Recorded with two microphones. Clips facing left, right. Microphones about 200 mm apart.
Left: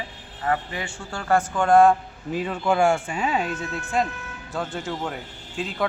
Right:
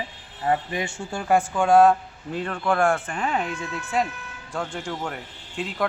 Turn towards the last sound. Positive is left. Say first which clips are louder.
# even
turn(degrees=0)  # may be behind; listen again after turning